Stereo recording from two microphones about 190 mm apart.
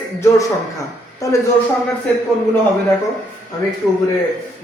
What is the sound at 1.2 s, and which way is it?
Speech, 15° left (ahead or behind).